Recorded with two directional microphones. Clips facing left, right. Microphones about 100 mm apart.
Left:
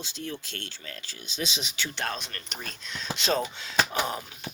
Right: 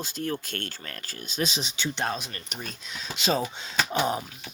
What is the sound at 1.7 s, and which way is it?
Speech, 20° right (ahead or behind).